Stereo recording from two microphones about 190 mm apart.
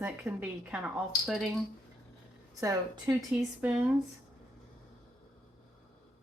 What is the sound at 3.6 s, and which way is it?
Speech, 5° right (ahead or behind).